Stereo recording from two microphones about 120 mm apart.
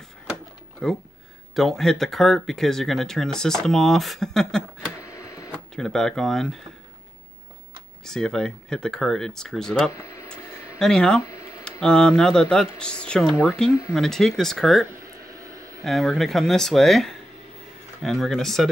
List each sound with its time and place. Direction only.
0.8 s speech: 5° left (ahead or behind)
5.0 s printer: 25° left (ahead or behind)
5.8 s speech: 5° left (ahead or behind)
8.0 s speech: 5° left (ahead or behind)
9.8 s a sound: 25° left (ahead or behind)
10.3 s a sound: 5° left (ahead or behind)
11.8 s speech: 5° left (ahead or behind)